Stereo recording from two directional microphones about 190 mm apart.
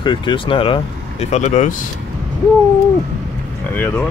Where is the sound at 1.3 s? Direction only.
40° left (ahead or behind).